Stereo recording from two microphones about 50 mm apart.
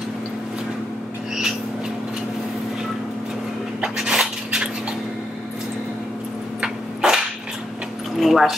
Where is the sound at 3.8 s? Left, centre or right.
Centre.